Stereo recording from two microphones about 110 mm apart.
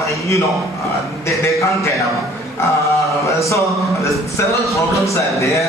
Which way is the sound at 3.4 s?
30° left (ahead or behind).